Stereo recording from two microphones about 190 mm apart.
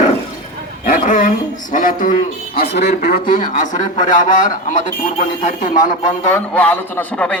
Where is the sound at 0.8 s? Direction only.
45° left (ahead or behind).